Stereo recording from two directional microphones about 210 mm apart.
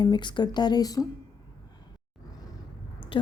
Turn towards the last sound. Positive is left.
turn(degrees=25)  # may be behind; listen again after turning